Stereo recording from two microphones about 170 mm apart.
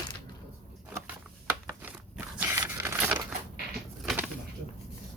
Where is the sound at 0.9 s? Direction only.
10° right (ahead or behind).